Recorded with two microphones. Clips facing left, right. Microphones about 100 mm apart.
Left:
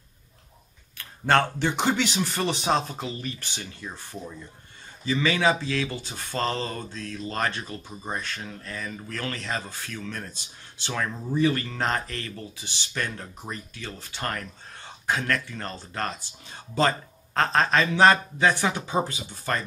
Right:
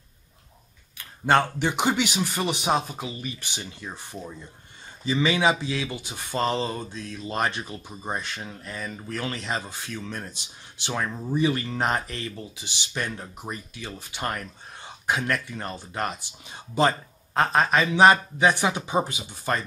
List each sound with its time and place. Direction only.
0.9 s speech: 10° right (ahead or behind)